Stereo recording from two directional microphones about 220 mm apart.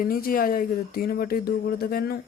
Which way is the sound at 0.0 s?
40° left (ahead or behind).